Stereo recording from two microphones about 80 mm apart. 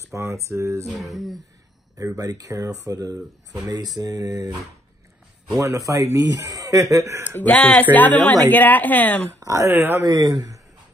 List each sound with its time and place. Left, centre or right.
0.0 s speech: right
0.8 s speech: centre
2.1 s speech: right
5.6 s speech: right
7.2 s a woman's voice: left
9.4 s speech: right
10.0 s speech: right